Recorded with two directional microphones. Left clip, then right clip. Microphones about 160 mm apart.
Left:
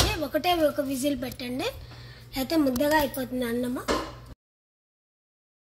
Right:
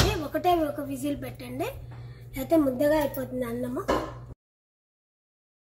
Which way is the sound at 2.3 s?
85° left.